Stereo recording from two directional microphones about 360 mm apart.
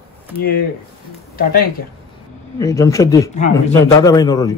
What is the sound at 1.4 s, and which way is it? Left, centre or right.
Speech, left.